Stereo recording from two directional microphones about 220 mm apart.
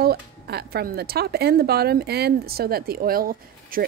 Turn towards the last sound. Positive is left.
turn(degrees=-40)  # may be behind; listen again after turning